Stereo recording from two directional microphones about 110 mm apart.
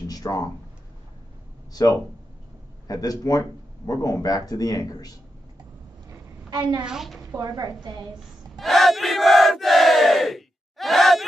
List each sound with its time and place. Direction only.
0.1 s speech: 35° left (ahead or behind)
1.7 s speech: 35° left (ahead or behind)
6.8 s a woman's voice: 5° right (ahead or behind)
7.2 s speech: 35° right (ahead or behind)
8.5 s battle cry: centre (ahead or behind)